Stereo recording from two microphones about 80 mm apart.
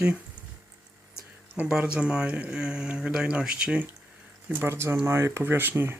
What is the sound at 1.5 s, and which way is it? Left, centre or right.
Speech, centre.